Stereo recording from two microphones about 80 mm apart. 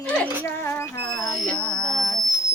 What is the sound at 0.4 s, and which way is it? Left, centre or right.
Music, left.